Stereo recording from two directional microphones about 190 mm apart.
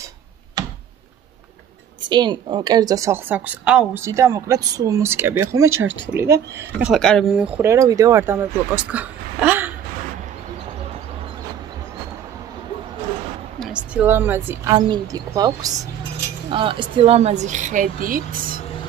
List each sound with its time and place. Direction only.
2.0 s a woman's voice: 25° right (ahead or behind)
5.6 s speech: 90° right
6.1 s a woman's voice: 15° right (ahead or behind)
6.9 s speech: 5° left (ahead or behind)
7.3 s a woman's voice: 10° right (ahead or behind)
13.6 s a woman's voice: 5° right (ahead or behind); by 18.6 s 50° right (ahead or behind)